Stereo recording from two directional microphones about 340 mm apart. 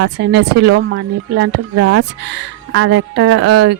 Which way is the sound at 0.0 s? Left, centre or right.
Right.